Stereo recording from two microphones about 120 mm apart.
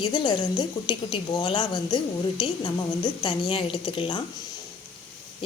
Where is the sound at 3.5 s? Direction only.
45° left (ahead or behind).